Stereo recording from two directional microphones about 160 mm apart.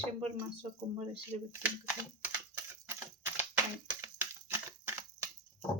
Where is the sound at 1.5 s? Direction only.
10° right (ahead or behind).